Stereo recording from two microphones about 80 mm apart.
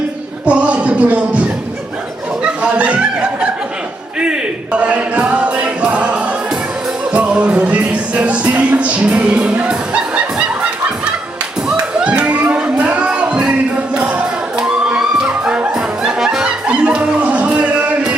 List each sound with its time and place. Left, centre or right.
0.4 s music: centre
2.4 s chuckle: centre
4.2 s music: centre